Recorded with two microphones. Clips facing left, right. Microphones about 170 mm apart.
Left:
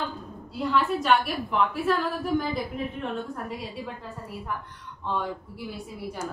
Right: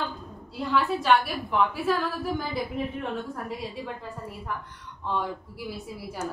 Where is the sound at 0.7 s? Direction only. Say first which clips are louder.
Right 1 dB; centre (ahead or behind).